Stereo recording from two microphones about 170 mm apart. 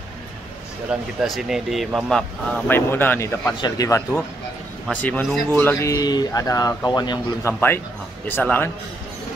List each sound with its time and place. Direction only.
0.9 s speech: 5° right (ahead or behind); by 4.0 s 20° left (ahead or behind)
5.0 s speech: 10° left (ahead or behind)
8.3 s speech: 10° left (ahead or behind)